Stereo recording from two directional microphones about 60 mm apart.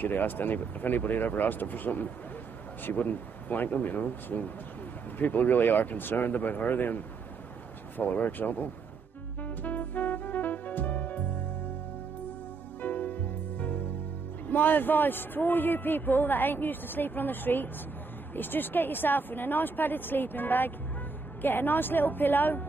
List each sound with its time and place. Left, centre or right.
0.0 s speech: left
8.0 s speech: left
9.4 s music: left
12.8 s music: left
14.5 s speech: left